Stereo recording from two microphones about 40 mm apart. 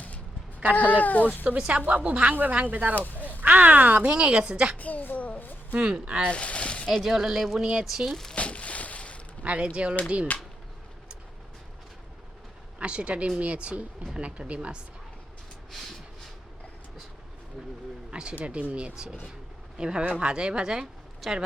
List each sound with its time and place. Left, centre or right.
0.8 s speech: left
1.5 s speech: right
4.1 s speech: right
4.8 s a woman's voice: left
5.7 s speech: right
6.3 s speech: left
6.9 s speech: centre
8.1 s speech: centre
8.4 s a sound: left
9.4 s speech: right
12.8 s speech: right
15.7 s a sound: centre
18.1 s speech: right
21.2 s speech: centre